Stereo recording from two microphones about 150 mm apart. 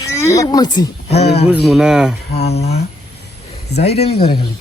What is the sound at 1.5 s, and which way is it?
Speech, centre (ahead or behind).